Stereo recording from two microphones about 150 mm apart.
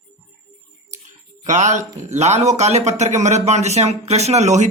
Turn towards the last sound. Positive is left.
turn(degrees=-50)  # may be behind; listen again after turning